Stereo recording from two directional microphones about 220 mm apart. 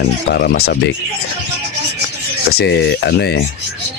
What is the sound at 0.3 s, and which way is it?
Speech, 45° left (ahead or behind).